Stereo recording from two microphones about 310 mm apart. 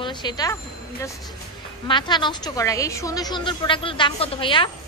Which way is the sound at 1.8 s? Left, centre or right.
Centre.